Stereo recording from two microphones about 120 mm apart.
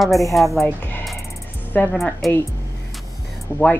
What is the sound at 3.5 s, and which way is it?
Speech, 20° left (ahead or behind).